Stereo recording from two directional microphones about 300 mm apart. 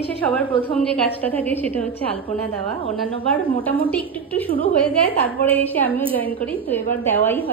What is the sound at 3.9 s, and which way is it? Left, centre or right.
A woman's voice, centre.